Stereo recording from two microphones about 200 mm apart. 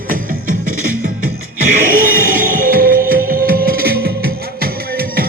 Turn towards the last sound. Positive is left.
turn(degrees=-50)  # may be behind; listen again after turning